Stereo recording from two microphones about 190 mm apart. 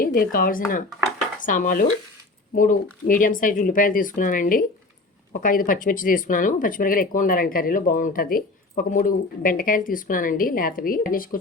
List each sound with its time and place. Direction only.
0.0 s speech: 50° left (ahead or behind)